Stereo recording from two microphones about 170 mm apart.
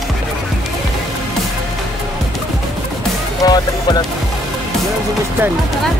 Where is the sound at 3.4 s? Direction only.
25° left (ahead or behind).